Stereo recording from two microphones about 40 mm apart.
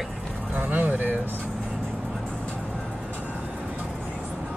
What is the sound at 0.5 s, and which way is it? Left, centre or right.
Speech, right.